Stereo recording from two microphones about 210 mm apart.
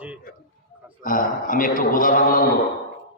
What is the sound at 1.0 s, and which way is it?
A man's voice, 40° left (ahead or behind).